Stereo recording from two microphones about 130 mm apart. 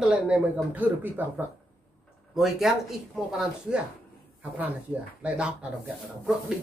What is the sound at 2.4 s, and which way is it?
Speech, centre (ahead or behind).